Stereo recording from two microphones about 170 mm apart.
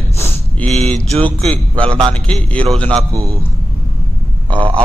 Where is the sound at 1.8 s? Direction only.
30° right (ahead or behind).